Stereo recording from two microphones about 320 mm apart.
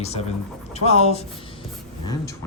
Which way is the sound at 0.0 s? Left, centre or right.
Centre.